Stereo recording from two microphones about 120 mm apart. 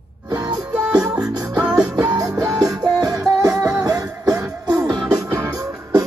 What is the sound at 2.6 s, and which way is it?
Music, 30° right (ahead or behind).